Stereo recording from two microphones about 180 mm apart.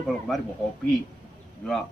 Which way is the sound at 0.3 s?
Centre (ahead or behind).